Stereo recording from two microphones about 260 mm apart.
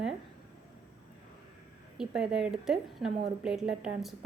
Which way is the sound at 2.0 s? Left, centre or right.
Centre.